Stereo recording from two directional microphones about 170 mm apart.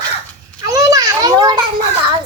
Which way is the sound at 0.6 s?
20° right (ahead or behind).